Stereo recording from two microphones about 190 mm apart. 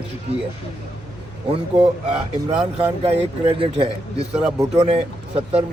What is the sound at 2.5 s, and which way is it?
A man's voice, 30° right (ahead or behind).